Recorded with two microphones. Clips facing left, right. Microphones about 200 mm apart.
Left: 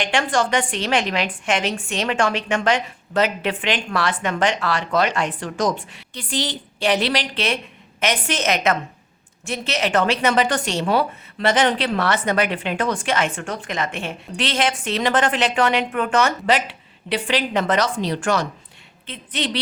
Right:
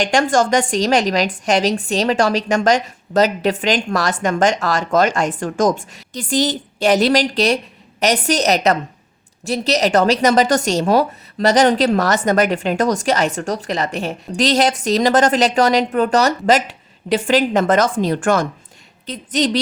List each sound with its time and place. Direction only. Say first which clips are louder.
0.0 s a woman's voice: right 5 dB; 40° right (ahead or behind)